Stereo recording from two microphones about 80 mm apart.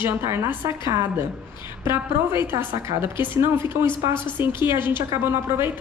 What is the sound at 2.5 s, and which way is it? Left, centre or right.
A woman's voice, right.